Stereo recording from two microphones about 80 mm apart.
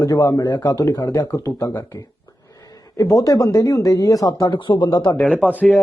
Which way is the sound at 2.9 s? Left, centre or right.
Left.